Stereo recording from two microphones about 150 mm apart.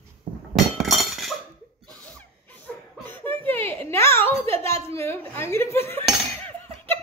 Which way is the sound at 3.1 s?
10° left (ahead or behind).